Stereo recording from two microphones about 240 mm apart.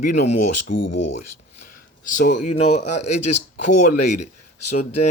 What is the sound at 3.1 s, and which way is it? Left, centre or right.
Speech, left.